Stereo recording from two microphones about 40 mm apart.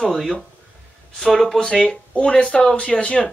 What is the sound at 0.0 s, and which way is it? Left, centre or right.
Speech, centre.